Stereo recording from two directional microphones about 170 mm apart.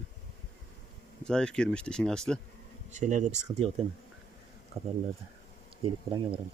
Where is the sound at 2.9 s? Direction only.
45° right (ahead or behind).